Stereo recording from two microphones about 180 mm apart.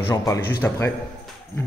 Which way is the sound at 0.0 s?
15° left (ahead or behind).